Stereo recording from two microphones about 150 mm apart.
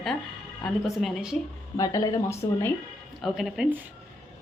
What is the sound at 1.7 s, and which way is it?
Speech, 25° left (ahead or behind).